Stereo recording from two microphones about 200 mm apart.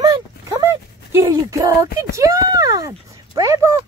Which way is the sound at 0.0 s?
20° right (ahead or behind).